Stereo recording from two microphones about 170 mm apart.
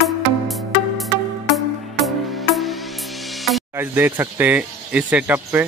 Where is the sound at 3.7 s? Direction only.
15° right (ahead or behind).